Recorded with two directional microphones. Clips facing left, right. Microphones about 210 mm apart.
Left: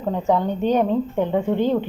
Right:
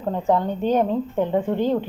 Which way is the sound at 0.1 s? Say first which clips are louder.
Left 1 dB; centre (ahead or behind).